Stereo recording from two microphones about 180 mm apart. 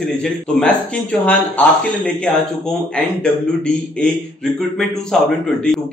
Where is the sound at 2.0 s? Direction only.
5° left (ahead or behind).